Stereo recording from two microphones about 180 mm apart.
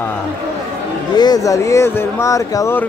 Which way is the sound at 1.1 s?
20° left (ahead or behind).